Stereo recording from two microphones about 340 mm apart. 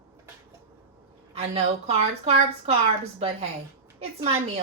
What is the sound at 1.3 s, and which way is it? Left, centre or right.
A woman's voice, centre.